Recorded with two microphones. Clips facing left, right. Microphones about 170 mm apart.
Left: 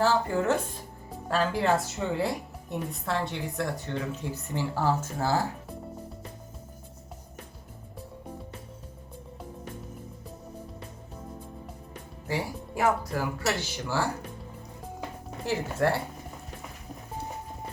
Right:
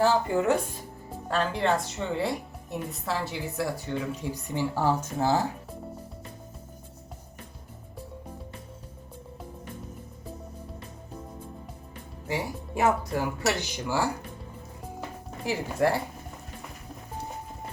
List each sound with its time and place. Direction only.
0.0 s speech: 15° right (ahead or behind)
1.3 s a woman's voice: centre (ahead or behind); by 5.4 s 20° right (ahead or behind)
12.3 s speech: 25° right (ahead or behind)
15.4 s speech: 10° right (ahead or behind)